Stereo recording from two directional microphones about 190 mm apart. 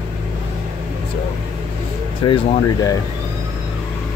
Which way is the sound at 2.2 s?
25° left (ahead or behind).